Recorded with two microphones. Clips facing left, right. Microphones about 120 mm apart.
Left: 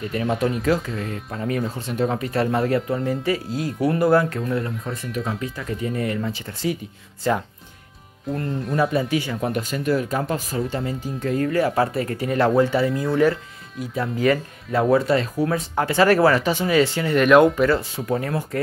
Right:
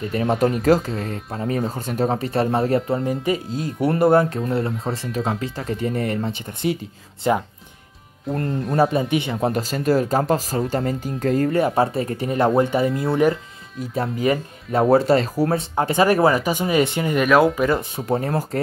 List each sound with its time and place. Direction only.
0.1 s speech: 35° right (ahead or behind)
2.0 s speech: 30° right (ahead or behind)
6.4 s speech: 20° right (ahead or behind)
8.5 s speech: centre (ahead or behind)
8.9 s speech: 25° right (ahead or behind); by 11.5 s 40° right (ahead or behind)
11.5 s speech: 25° right (ahead or behind)
14.2 s speech: 20° right (ahead or behind)
14.9 s speech: 35° right (ahead or behind)
15.7 s speech: 20° right (ahead or behind); by 17.6 s centre (ahead or behind)
17.6 s speech: 20° right (ahead or behind)
18.0 s speech: 30° right (ahead or behind)